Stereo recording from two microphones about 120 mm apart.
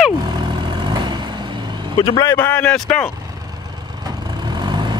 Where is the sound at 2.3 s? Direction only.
15° left (ahead or behind).